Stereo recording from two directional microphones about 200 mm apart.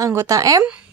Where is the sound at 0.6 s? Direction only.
5° right (ahead or behind).